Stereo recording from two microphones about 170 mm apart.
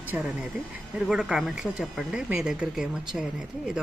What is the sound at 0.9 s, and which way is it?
Speech, 5° right (ahead or behind).